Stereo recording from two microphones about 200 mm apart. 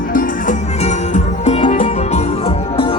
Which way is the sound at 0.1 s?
40° left (ahead or behind).